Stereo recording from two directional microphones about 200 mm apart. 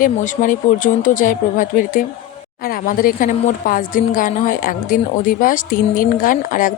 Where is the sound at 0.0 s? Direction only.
45° left (ahead or behind).